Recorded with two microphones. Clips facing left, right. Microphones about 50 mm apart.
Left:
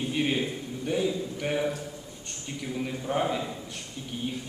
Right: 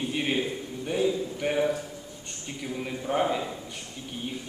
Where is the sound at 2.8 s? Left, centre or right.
Centre.